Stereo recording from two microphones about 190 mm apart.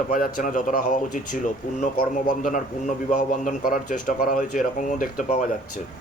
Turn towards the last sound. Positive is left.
turn(degrees=45)  # may be behind; listen again after turning